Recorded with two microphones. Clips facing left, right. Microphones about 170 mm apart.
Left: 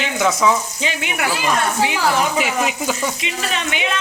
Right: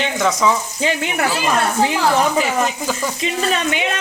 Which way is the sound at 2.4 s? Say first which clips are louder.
Right 1 dB; 5° left (ahead or behind).